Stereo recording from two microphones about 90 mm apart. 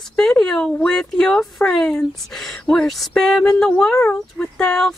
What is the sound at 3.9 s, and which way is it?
Speech, 30° left (ahead or behind).